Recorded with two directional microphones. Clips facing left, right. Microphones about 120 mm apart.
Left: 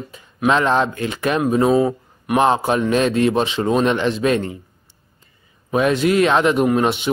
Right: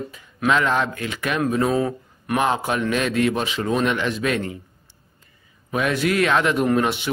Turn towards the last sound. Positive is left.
turn(degrees=20)  # may be behind; listen again after turning